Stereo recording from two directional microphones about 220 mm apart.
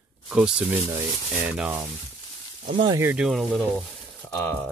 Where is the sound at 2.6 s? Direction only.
25° right (ahead or behind).